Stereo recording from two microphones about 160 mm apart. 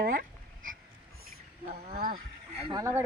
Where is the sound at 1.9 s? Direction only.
60° right (ahead or behind).